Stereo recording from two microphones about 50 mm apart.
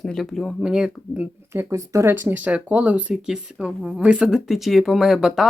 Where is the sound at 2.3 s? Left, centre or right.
Right.